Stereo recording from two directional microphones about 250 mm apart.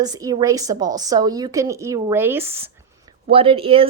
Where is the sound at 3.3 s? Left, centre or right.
Right.